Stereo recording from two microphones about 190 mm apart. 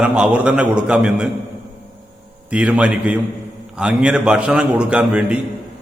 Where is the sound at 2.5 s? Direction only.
5° right (ahead or behind).